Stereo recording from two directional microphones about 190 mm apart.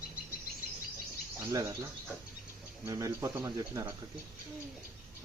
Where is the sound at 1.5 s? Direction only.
15° right (ahead or behind).